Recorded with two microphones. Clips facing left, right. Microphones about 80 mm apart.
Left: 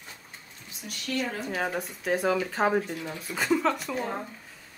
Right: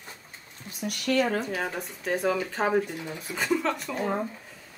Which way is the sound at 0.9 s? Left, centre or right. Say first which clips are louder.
Right 6 dB; right.